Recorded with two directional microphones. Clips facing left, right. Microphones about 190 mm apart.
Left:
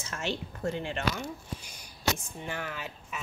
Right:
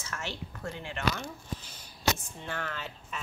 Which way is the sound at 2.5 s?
10° left (ahead or behind).